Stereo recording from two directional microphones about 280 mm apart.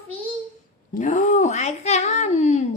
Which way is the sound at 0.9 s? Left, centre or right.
Left.